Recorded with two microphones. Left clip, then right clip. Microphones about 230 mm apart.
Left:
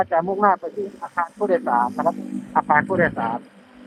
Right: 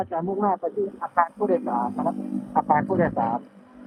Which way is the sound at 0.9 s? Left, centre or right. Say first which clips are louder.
Right 3 dB; centre.